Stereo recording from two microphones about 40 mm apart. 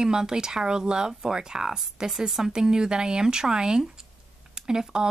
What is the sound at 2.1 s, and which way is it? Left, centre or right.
Speech, centre.